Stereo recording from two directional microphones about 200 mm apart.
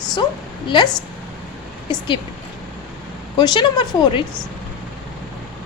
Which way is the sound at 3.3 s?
20° left (ahead or behind).